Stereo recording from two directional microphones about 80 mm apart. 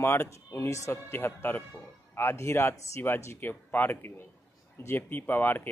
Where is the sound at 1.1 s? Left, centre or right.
Left.